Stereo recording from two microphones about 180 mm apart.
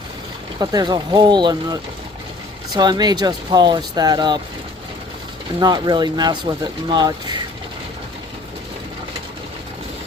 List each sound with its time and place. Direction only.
0.6 s speech: 25° right (ahead or behind)
5.5 s speech: 25° right (ahead or behind)